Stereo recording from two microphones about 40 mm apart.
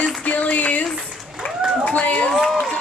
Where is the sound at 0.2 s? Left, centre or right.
Left.